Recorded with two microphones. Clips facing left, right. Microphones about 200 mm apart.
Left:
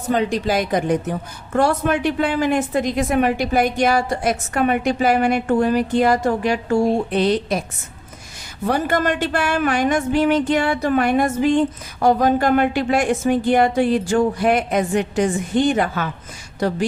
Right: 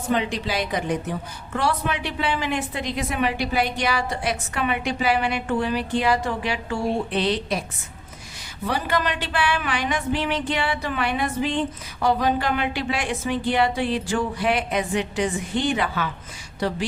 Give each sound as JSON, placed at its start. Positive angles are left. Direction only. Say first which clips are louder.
{"t": 0.1, "sound": "speech", "louder": "left 5 dB", "side_deg": 45}
{"t": 8.6, "sound": "a woman's voice", "louder": "left 5 dB", "side_deg": 50}